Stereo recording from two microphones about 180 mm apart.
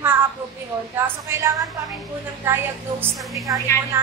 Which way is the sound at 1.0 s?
15° right (ahead or behind).